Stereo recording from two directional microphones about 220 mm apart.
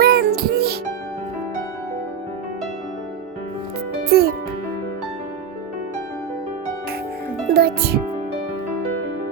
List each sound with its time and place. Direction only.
0.0 s music: 45° right (ahead or behind)
4.1 s speech: 45° right (ahead or behind)
7.5 s speech: 45° right (ahead or behind)